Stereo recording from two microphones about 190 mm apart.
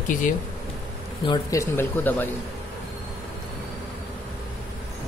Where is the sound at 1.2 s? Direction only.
20° left (ahead or behind).